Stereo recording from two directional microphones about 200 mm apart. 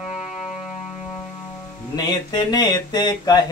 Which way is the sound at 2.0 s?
20° left (ahead or behind).